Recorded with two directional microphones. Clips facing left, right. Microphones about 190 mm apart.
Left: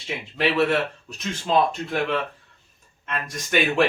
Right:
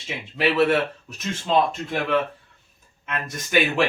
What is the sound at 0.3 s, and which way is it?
Speech, 5° right (ahead or behind).